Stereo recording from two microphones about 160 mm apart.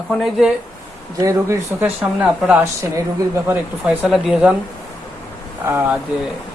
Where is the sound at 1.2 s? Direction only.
15° right (ahead or behind).